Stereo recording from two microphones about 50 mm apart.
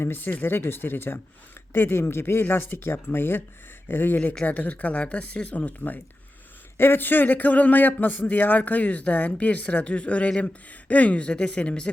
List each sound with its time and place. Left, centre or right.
0.0 s speech: left
4.4 s speech: left
6.7 s a man's voice: left